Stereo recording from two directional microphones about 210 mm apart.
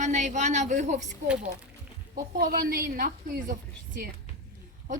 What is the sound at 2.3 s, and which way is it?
A woman's voice, 45° right (ahead or behind).